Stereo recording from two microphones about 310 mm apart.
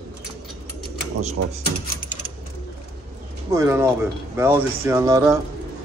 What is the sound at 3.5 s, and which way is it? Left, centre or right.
Speech, centre.